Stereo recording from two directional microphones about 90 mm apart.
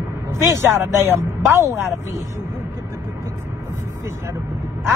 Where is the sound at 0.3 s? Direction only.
30° right (ahead or behind).